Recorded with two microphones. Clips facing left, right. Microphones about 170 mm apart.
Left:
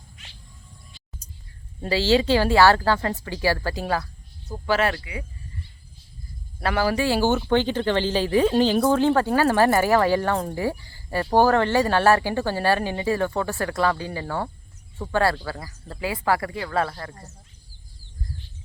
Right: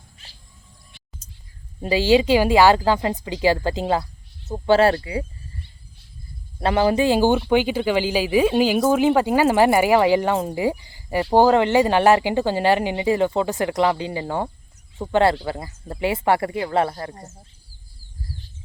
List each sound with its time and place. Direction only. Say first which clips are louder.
1.8 s speech: right 3 dB; 15° right (ahead or behind); by 5.2 s 35° right (ahead or behind)
6.6 s speech: right 4 dB; 25° right (ahead or behind)